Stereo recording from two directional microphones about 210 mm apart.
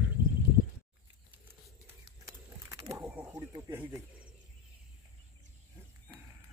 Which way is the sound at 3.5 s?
15° right (ahead or behind).